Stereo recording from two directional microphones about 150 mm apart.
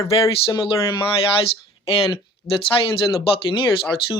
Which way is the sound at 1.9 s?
35° left (ahead or behind).